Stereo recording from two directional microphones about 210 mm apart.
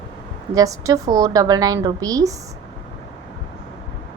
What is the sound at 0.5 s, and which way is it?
A woman's voice, 15° right (ahead or behind).